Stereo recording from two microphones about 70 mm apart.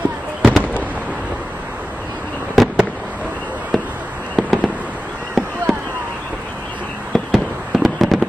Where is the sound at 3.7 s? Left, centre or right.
Centre.